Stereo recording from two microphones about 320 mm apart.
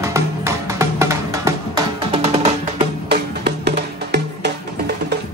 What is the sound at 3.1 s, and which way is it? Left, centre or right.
Music, right.